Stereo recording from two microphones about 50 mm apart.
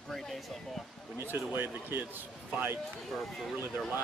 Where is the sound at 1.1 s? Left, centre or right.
Right.